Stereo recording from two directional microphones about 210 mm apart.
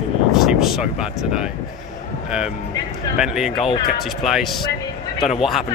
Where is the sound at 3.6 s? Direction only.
25° left (ahead or behind).